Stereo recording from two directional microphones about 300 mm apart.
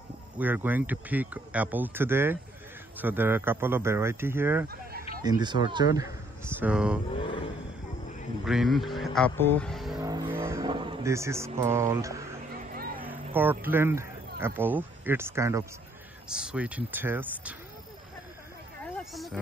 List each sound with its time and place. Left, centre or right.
0.4 s a man's voice: centre
7.1 s vehicle: centre
8.5 s speech: centre
9.9 s vehicle: centre
12.7 s a sound: right
13.0 s speech: centre
18.9 s a sound: centre